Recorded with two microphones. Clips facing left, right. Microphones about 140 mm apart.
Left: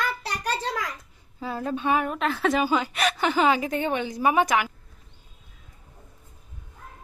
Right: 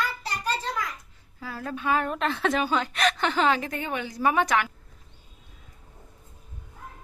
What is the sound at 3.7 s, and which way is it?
A woman's voice, 25° left (ahead or behind).